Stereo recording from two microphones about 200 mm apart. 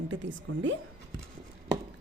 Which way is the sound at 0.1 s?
70° right (ahead or behind).